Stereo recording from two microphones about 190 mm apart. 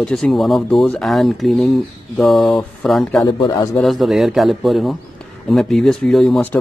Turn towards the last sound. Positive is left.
turn(degrees=5)  # may be behind; listen again after turning